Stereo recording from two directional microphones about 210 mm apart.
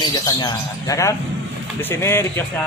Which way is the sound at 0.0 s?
20° left (ahead or behind).